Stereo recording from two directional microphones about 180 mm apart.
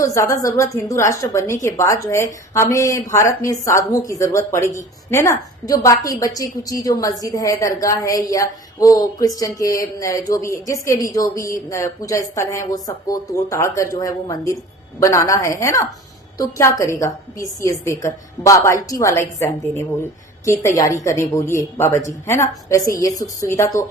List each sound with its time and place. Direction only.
0.0 s a woman's voice: 15° left (ahead or behind)